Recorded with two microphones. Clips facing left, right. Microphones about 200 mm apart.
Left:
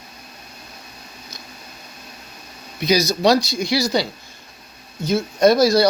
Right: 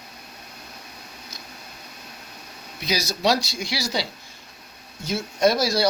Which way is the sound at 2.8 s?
5° right (ahead or behind).